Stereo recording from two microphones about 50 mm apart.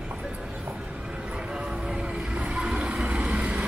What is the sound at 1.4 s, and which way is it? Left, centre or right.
Vehicle, centre.